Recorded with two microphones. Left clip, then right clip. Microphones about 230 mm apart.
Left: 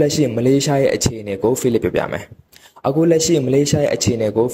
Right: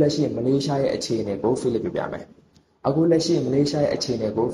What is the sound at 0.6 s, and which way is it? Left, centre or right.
Speech, left.